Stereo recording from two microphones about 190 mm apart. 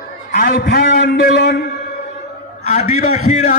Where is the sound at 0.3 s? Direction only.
55° left (ahead or behind).